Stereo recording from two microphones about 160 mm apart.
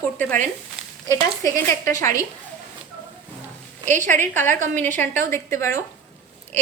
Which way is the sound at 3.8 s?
50° right (ahead or behind).